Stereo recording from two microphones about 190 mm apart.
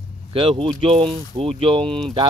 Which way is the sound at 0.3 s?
30° right (ahead or behind).